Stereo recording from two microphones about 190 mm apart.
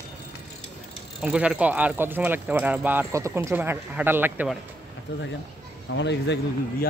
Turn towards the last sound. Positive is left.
turn(degrees=65)  # may be behind; listen again after turning